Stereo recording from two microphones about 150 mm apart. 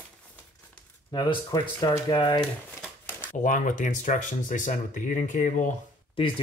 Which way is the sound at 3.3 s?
55° left (ahead or behind).